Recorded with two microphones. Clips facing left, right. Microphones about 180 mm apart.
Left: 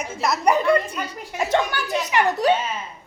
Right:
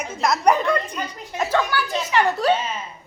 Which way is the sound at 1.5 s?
20° left (ahead or behind).